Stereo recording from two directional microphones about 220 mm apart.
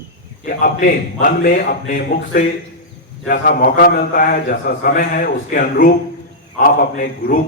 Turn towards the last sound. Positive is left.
turn(degrees=40)  # may be behind; listen again after turning